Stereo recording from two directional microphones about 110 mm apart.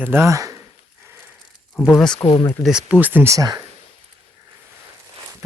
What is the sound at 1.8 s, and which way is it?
Speech, 15° right (ahead or behind).